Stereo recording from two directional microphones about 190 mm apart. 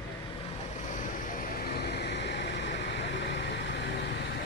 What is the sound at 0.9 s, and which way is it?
Vehicle, 40° left (ahead or behind).